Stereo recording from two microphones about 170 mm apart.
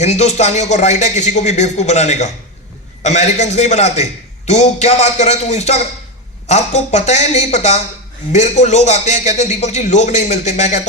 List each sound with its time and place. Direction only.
0.0 s a man's voice: 40° left (ahead or behind)